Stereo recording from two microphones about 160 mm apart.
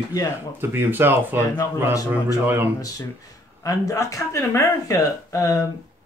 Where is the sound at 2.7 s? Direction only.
20° left (ahead or behind).